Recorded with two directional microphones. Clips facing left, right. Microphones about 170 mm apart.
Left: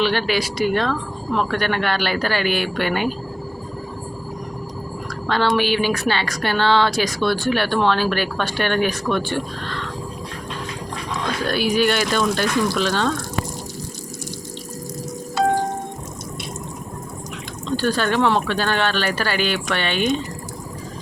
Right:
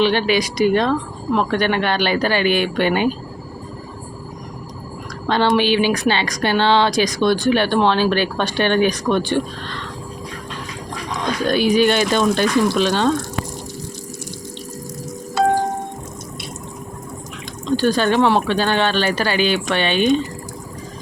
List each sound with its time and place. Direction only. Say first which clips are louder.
0.0 s a woman's voice: right 3 dB; 20° right (ahead or behind)
5.3 s a woman's voice: right 3 dB; 20° right (ahead or behind)
11.4 s a woman's voice: right 4 dB; 20° right (ahead or behind)
17.7 s speech: right 4 dB; 15° right (ahead or behind)